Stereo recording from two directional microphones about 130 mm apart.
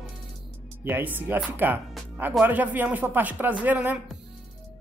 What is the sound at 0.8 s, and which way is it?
Speech, 15° right (ahead or behind).